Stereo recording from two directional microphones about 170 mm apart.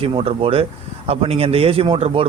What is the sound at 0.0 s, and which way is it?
Speech, 35° right (ahead or behind).